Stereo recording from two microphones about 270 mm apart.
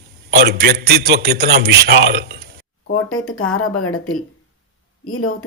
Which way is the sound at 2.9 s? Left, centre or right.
Left.